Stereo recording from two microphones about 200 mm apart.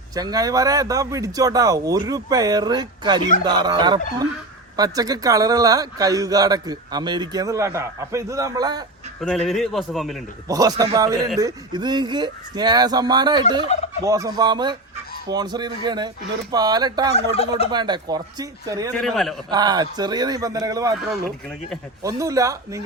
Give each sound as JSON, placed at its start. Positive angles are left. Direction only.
{"t": 0.1, "sound": "speech", "side_deg": -20}
{"t": 9.2, "sound": "a man's voice", "side_deg": 0}
{"t": 10.5, "sound": "speech", "side_deg": -20}
{"t": 19.0, "sound": "a man's voice", "side_deg": 0}
{"t": 19.5, "sound": "speech", "side_deg": -20}
{"t": 22.0, "sound": "speech", "side_deg": -15}